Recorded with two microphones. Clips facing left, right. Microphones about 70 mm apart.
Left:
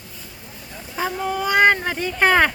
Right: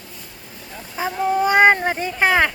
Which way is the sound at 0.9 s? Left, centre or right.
Centre.